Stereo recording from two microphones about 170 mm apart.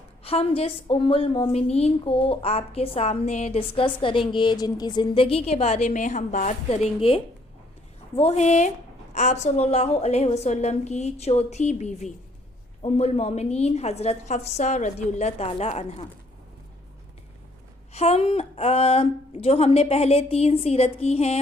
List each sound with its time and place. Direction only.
0.3 s a woman's voice: 35° left (ahead or behind)
17.9 s a woman's voice: 40° left (ahead or behind)